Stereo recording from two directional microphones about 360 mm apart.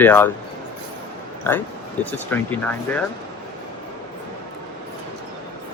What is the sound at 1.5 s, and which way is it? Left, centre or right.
Speech, centre.